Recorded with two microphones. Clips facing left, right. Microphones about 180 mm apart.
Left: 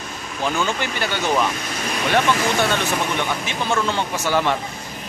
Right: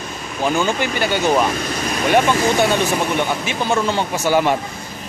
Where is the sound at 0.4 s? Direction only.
10° right (ahead or behind).